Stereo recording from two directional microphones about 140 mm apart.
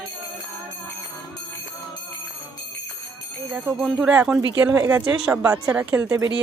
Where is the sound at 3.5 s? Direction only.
Centre (ahead or behind); by 6.3 s 20° right (ahead or behind).